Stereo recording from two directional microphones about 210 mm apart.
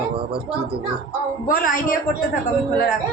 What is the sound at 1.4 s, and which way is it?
Speech, 40° left (ahead or behind).